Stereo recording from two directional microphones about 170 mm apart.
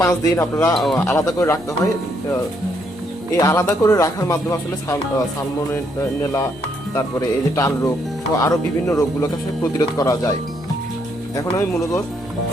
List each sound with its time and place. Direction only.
0.0 s speech: 20° left (ahead or behind)
0.7 s speech: centre (ahead or behind)
0.9 s speech: 15° left (ahead or behind)
3.3 s speech: 15° left (ahead or behind)
6.9 s speech: 20° left (ahead or behind)
11.3 s speech: 20° left (ahead or behind)